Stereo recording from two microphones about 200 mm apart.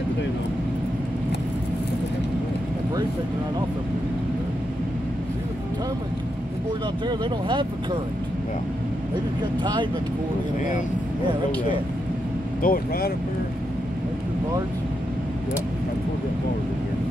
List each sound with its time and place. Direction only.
7.1 s speech: 25° right (ahead or behind)
9.6 s speech: 25° right (ahead or behind)
12.6 s speech: 45° left (ahead or behind)